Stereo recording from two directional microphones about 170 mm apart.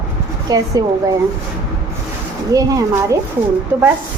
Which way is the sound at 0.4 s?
20° right (ahead or behind).